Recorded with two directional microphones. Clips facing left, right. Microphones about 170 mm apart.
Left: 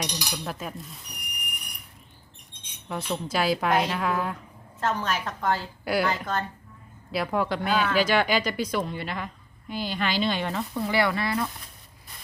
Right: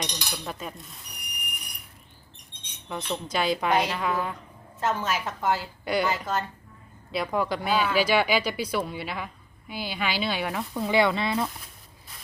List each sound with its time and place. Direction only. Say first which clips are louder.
0.0 s a woman's voice: left 2 dB; 10° left (ahead or behind)
2.9 s a woman's voice: left 1 dB; 5° left (ahead or behind)
5.8 s a woman's voice: left 1 dB; 5° left (ahead or behind)
6.1 s speech: even; 5° right (ahead or behind)
10.9 s speech: right 2 dB; 20° right (ahead or behind)